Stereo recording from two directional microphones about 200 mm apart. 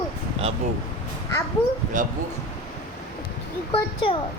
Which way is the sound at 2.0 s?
40° right (ahead or behind).